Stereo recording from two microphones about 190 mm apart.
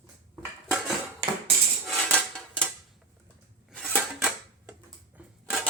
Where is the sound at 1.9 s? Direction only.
5° left (ahead or behind).